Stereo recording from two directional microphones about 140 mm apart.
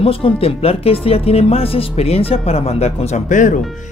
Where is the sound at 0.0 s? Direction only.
45° left (ahead or behind); by 3.6 s 65° left (ahead or behind).